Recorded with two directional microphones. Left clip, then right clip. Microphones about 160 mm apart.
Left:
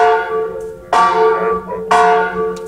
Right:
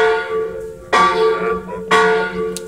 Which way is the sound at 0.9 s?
30° right (ahead or behind).